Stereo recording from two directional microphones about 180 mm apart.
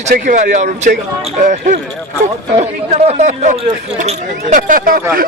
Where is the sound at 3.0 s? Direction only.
40° right (ahead or behind).